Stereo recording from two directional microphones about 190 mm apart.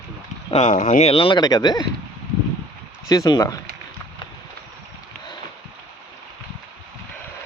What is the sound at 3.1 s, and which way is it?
Speech, 20° left (ahead or behind).